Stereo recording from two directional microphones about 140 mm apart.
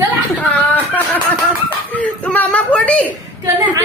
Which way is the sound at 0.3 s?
10° left (ahead or behind).